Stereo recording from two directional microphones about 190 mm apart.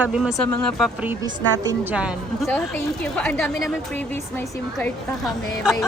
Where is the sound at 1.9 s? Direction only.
5° right (ahead or behind).